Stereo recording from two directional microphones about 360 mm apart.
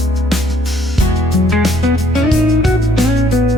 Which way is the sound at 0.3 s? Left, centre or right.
Centre.